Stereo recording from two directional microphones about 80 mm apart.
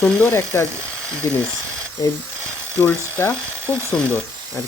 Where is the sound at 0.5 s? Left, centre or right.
Left.